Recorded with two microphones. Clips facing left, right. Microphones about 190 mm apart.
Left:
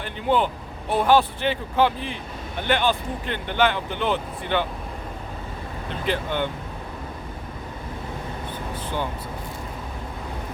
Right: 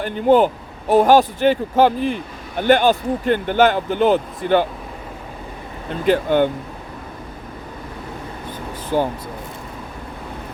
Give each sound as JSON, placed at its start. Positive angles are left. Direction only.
{"t": 0.0, "sound": "speech", "side_deg": -45}
{"t": 6.1, "sound": "speech", "side_deg": -45}
{"t": 8.9, "sound": "speech", "side_deg": -40}